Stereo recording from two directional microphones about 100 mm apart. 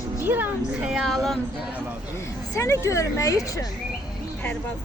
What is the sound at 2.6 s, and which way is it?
Speech, 30° left (ahead or behind).